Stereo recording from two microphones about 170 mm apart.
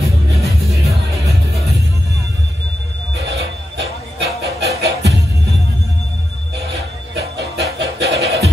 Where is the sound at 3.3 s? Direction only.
85° right.